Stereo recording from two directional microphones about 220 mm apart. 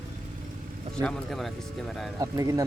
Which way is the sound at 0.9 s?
5° left (ahead or behind).